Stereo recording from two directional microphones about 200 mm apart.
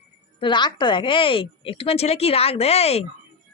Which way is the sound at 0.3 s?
25° left (ahead or behind).